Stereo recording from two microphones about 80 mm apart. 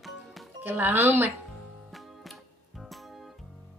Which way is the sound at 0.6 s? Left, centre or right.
Right.